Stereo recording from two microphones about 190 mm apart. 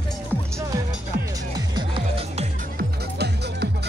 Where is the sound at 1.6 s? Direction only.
25° right (ahead or behind).